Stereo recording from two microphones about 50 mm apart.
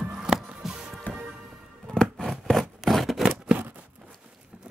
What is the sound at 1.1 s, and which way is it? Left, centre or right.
Music, left.